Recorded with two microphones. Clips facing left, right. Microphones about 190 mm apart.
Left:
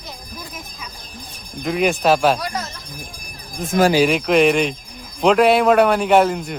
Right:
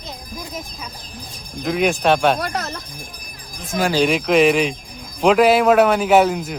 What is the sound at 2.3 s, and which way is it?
Speech, 60° right (ahead or behind).